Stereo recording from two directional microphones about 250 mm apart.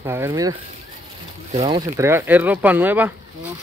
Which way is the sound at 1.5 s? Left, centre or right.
Right.